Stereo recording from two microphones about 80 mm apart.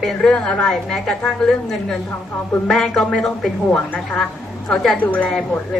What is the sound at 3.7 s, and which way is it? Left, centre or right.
A woman's voice, centre.